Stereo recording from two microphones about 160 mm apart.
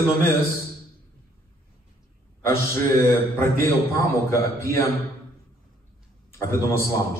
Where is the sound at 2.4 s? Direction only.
15° left (ahead or behind).